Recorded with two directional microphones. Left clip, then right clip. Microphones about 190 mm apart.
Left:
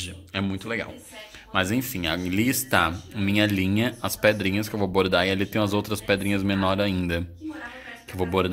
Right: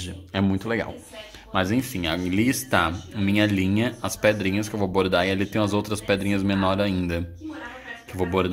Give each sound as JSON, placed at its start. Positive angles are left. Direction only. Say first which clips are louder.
{"t": 0.0, "sound": "speech", "louder": "right 3 dB", "side_deg": -20}
{"t": 1.5, "sound": "speech", "louder": "right 1 dB", "side_deg": 0}